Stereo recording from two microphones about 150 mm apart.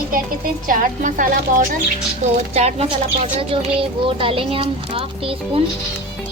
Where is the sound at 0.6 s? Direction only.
65° right (ahead or behind).